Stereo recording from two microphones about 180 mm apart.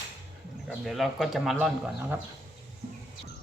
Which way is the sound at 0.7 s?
Centre (ahead or behind).